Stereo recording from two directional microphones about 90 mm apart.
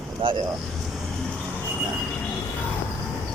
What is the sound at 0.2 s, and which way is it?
Speech, 70° right (ahead or behind).